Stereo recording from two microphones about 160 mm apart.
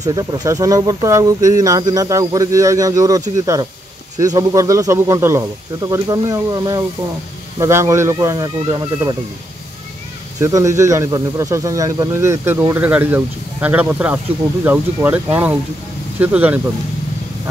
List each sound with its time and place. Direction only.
0.0 s speech: 25° right (ahead or behind)
10.4 s speech: 20° right (ahead or behind)